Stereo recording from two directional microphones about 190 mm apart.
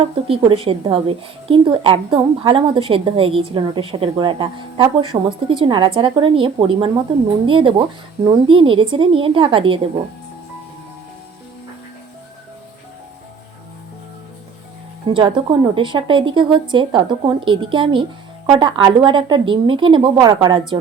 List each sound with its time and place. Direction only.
0.0 s a woman's voice: 30° right (ahead or behind)
15.1 s a woman's voice: 25° right (ahead or behind)